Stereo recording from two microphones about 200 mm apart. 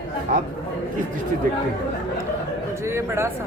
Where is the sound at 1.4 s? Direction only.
45° right (ahead or behind).